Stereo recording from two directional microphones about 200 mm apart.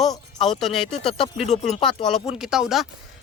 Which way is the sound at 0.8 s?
25° left (ahead or behind).